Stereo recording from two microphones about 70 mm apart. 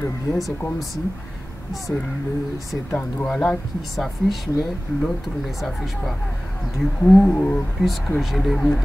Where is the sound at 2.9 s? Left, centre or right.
Left.